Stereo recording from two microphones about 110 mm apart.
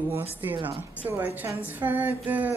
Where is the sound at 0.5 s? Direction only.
55° right (ahead or behind).